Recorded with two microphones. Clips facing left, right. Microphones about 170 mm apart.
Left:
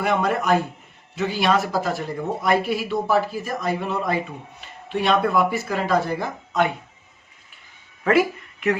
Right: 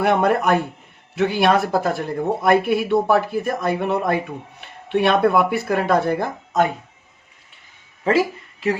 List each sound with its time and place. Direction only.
0.0 s speech: 60° right (ahead or behind)
8.0 s speech: 25° right (ahead or behind)